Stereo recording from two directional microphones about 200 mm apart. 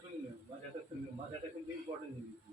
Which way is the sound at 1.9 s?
30° right (ahead or behind).